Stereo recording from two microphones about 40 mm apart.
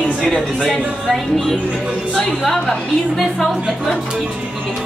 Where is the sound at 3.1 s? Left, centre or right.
Centre.